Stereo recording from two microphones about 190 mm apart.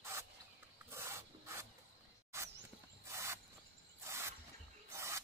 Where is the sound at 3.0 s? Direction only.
15° right (ahead or behind).